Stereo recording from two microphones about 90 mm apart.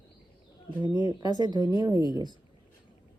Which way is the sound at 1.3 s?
50° left (ahead or behind).